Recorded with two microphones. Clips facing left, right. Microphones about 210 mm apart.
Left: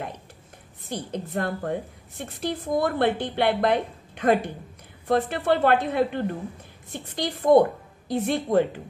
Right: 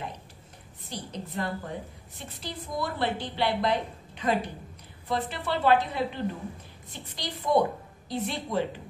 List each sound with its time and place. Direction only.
0.8 s a woman's voice: 55° left (ahead or behind)